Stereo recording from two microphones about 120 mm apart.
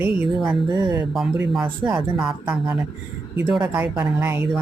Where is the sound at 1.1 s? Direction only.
Centre (ahead or behind).